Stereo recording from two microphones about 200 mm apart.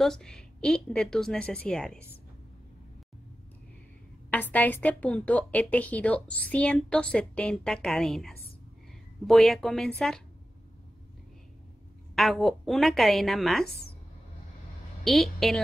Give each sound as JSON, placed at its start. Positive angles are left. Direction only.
{"t": 0.0, "sound": "a woman's voice", "side_deg": 0}
{"t": 4.3, "sound": "a woman's voice", "side_deg": 10}
{"t": 12.2, "sound": "a woman's voice", "side_deg": 0}
{"t": 15.0, "sound": "a woman's voice", "side_deg": 0}